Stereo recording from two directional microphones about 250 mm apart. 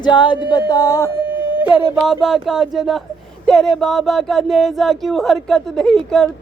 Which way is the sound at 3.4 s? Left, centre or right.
Centre.